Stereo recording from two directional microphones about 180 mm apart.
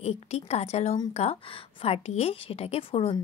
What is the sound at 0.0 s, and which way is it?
A woman's voice, 35° left (ahead or behind).